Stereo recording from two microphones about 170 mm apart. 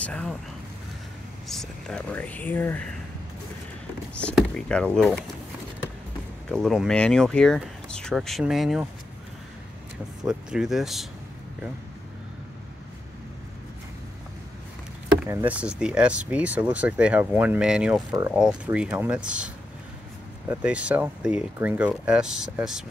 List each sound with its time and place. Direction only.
0.0 s speech: 5° left (ahead or behind)
1.5 s speech: centre (ahead or behind)
4.2 s speech: 5° left (ahead or behind)
6.5 s speech: centre (ahead or behind)
10.2 s speech: 5° right (ahead or behind)
15.2 s speech: 10° right (ahead or behind)
18.1 s speech: 20° right (ahead or behind)
18.4 s speech: 5° right (ahead or behind)